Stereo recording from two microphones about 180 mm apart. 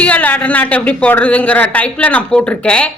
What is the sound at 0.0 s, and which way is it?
A woman's voice, 10° left (ahead or behind).